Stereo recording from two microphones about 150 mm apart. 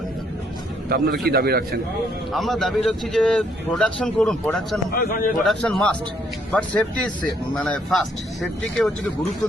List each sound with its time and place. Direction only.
0.9 s a man's voice: 90° right
2.3 s a man's voice: centre (ahead or behind)
4.9 s a man's voice: 70° left (ahead or behind)
5.4 s a man's voice: centre (ahead or behind)